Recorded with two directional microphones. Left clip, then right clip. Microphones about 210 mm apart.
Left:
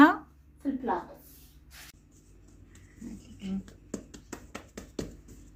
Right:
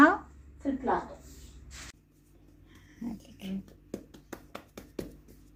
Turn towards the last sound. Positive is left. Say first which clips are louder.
# left 1 dB
turn(degrees=5)  # may be behind; listen again after turning